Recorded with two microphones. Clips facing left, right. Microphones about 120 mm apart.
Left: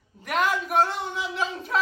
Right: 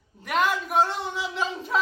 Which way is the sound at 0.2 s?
Centre (ahead or behind).